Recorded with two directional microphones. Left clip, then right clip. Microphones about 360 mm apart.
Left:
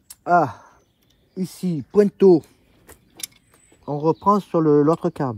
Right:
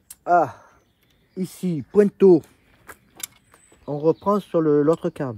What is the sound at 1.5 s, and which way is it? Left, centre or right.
Speech, centre.